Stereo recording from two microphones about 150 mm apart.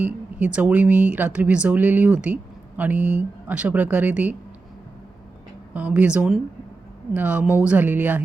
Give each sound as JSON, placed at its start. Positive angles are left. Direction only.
{"t": 0.0, "sound": "speech", "side_deg": -10}
{"t": 5.7, "sound": "speech", "side_deg": -10}